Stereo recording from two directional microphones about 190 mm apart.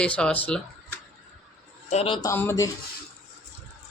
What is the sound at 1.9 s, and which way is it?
Speech, 30° left (ahead or behind).